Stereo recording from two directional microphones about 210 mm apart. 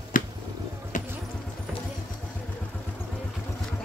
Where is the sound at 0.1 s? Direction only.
40° left (ahead or behind).